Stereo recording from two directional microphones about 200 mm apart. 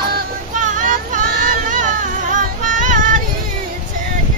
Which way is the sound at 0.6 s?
40° right (ahead or behind).